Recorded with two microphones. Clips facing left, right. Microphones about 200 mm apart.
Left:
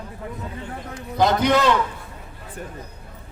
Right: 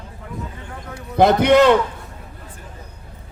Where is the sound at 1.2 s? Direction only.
60° right (ahead or behind).